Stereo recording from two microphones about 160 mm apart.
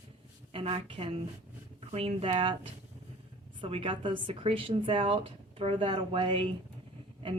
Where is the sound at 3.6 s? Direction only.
35° right (ahead or behind).